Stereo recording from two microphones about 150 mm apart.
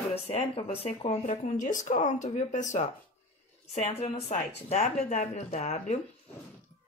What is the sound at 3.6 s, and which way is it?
Speech, 45° left (ahead or behind).